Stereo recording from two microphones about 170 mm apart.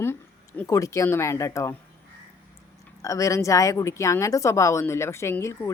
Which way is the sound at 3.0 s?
20° left (ahead or behind).